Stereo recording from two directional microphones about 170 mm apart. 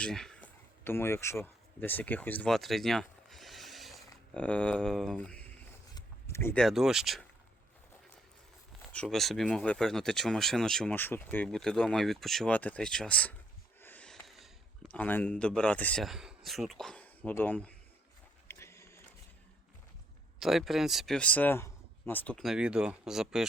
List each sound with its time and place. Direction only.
0.0 s speech: 5° left (ahead or behind)
8.9 s speech: 5° left (ahead or behind)
18.4 s a sound: 15° left (ahead or behind)
20.4 s speech: centre (ahead or behind)